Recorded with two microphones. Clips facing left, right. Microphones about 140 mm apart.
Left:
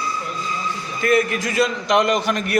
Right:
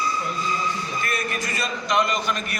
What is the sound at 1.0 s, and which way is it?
A man's voice, 90° left.